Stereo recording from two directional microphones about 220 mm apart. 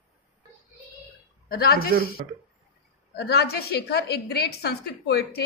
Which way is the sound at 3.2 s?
45° left (ahead or behind).